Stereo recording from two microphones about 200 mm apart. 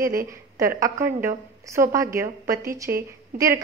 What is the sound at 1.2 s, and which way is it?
A woman's voice, 15° right (ahead or behind).